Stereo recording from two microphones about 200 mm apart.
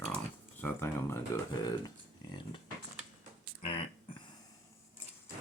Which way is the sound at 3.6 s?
25° left (ahead or behind).